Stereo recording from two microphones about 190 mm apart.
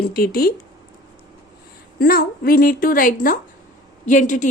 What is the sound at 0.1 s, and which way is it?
Speech, 50° left (ahead or behind).